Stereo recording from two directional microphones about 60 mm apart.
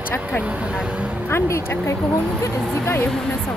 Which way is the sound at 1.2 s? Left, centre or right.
Left.